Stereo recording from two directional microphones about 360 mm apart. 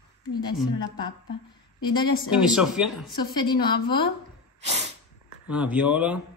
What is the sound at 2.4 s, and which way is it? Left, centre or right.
Speech, centre.